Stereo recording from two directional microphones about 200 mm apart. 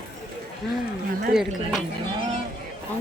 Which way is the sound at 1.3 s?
Centre (ahead or behind).